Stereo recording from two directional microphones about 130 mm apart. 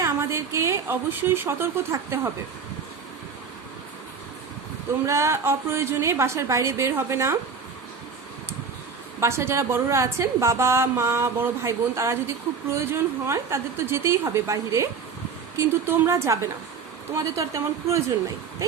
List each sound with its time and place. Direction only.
0.0 s a woman's voice: 20° right (ahead or behind)
5.0 s a woman's voice: 20° right (ahead or behind)
9.2 s a woman's voice: 20° right (ahead or behind)